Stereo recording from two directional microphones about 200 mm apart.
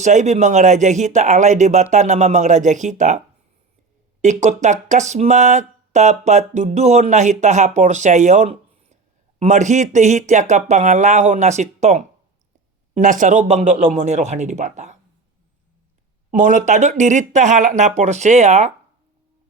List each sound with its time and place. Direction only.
0.0 s speech: 35° right (ahead or behind)
4.2 s speech: 35° right (ahead or behind)
16.3 s speech: 35° right (ahead or behind)